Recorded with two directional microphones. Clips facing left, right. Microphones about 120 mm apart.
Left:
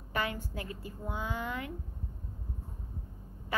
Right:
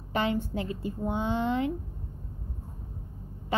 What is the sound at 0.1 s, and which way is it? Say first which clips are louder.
A woman's voice: right 7 dB; 25° right (ahead or behind).